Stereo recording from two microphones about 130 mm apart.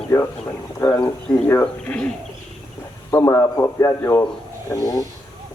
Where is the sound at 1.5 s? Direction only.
15° left (ahead or behind).